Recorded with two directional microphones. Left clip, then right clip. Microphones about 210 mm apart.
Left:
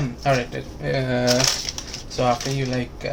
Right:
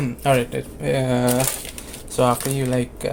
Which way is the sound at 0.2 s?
40° right (ahead or behind).